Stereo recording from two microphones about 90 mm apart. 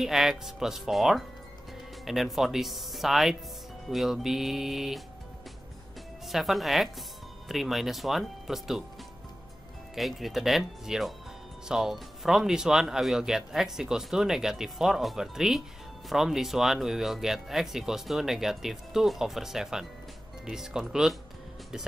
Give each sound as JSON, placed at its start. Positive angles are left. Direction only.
{"t": 0.0, "sound": "speech", "side_deg": -5}
{"t": 6.2, "sound": "speech", "side_deg": 0}
{"t": 9.9, "sound": "speech", "side_deg": 0}